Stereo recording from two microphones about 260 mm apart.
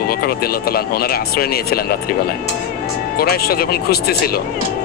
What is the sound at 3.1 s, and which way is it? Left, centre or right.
Speech, left.